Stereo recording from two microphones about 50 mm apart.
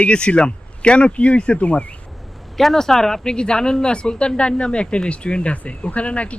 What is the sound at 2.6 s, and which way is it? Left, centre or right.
Speech, centre.